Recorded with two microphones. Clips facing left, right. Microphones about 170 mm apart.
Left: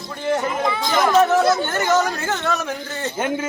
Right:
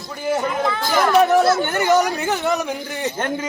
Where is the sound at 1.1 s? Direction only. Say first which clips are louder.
Right 2 dB; 15° right (ahead or behind).